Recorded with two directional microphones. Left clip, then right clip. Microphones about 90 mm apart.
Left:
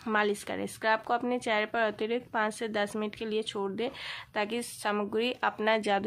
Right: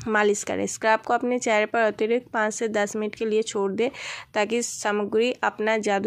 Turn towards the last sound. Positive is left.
turn(degrees=-40)  # may be behind; listen again after turning